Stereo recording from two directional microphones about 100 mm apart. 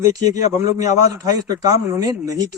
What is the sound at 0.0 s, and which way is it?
A man's voice, 35° right (ahead or behind).